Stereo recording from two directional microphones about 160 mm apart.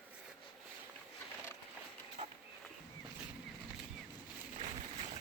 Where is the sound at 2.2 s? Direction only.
45° right (ahead or behind).